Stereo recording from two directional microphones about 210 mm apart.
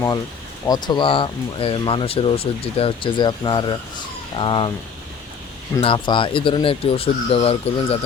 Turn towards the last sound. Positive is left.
turn(degrees=25)  # may be behind; listen again after turning